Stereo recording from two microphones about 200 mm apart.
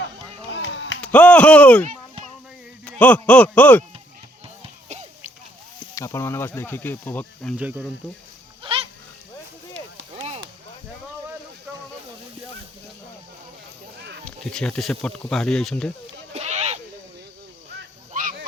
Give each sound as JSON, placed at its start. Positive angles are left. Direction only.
{"t": 0.5, "sound": "a sound", "side_deg": 65}
{"t": 1.0, "sound": "speech", "side_deg": 5}
{"t": 5.9, "sound": "speech", "side_deg": 15}
{"t": 7.5, "sound": "speech", "side_deg": -5}
{"t": 8.6, "sound": "goat", "side_deg": -25}
{"t": 10.2, "sound": "chop", "side_deg": -30}
{"t": 14.3, "sound": "speech", "side_deg": 5}
{"t": 16.3, "sound": "sheep", "side_deg": -35}